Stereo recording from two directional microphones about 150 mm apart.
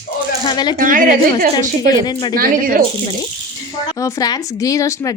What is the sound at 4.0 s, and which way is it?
Speech, 25° left (ahead or behind).